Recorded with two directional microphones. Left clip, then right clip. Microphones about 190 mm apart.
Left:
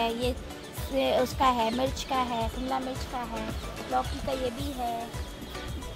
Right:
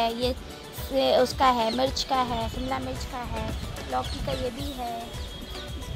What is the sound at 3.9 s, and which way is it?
Music, 20° right (ahead or behind).